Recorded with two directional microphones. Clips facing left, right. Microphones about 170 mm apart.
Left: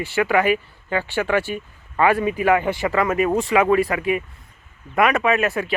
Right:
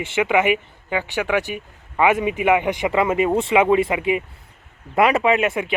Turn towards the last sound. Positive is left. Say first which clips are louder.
# right 1 dB
turn(degrees=-20)  # may be behind; listen again after turning